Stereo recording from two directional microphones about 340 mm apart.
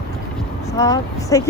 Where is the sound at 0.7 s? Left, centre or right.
Centre.